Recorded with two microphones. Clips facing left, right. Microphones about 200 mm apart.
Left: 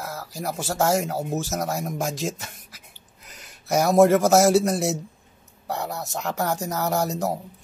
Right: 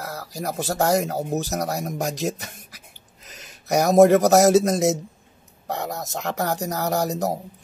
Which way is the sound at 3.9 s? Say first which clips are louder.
Right 2 dB; 20° right (ahead or behind).